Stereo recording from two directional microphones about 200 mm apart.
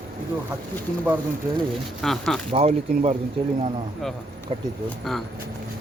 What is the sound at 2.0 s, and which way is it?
Speech, centre (ahead or behind).